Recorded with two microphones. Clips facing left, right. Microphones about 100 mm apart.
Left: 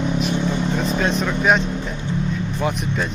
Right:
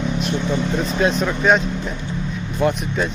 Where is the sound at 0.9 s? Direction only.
Centre (ahead or behind).